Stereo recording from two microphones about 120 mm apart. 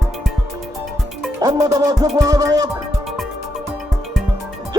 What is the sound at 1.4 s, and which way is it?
Speech, 30° right (ahead or behind).